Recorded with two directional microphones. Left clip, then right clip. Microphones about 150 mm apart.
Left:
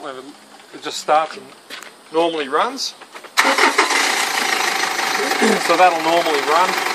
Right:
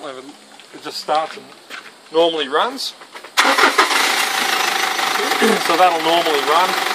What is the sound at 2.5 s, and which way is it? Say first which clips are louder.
Speech: right 1 dB; 40° left (ahead or behind).